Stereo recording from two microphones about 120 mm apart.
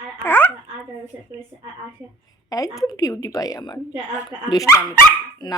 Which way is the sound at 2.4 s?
30° left (ahead or behind).